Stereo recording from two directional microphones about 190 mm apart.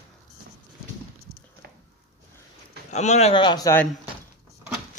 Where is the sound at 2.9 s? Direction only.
35° left (ahead or behind); by 3.8 s 20° left (ahead or behind).